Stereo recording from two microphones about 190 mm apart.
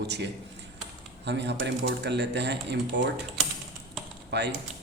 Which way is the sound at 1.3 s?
65° right (ahead or behind).